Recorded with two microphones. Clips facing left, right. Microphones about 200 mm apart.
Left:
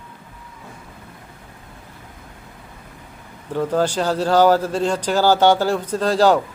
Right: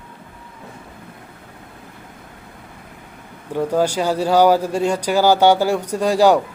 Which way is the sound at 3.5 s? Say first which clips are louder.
Right 1 dB; 10° right (ahead or behind).